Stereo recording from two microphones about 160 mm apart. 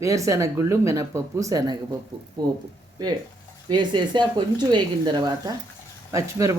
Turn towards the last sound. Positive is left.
turn(degrees=-20)  # may be behind; listen again after turning